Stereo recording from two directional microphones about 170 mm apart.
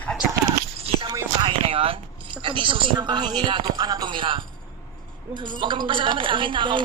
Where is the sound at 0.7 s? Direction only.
35° right (ahead or behind).